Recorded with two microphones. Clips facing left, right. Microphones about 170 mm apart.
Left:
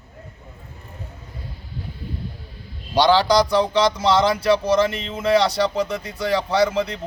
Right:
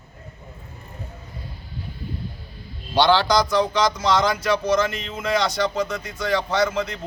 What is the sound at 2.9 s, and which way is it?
Speech, 10° left (ahead or behind).